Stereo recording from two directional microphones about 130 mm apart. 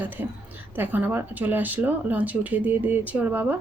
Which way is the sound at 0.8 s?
15° right (ahead or behind).